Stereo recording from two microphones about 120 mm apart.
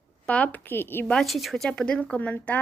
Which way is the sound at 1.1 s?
Centre (ahead or behind).